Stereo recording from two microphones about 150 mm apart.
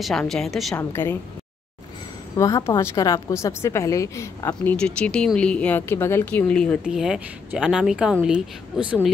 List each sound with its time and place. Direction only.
0.0 s speech: centre (ahead or behind)
0.7 s speech: 15° left (ahead or behind)
2.3 s a woman's voice: 20° left (ahead or behind)
4.7 s speech: 5° left (ahead or behind)
6.8 s speech: 5° right (ahead or behind)